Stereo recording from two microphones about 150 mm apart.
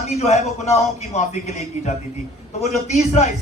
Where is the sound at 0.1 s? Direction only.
50° left (ahead or behind).